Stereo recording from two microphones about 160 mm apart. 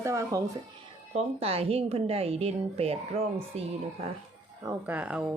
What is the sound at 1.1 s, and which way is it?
A woman's voice, 40° right (ahead or behind).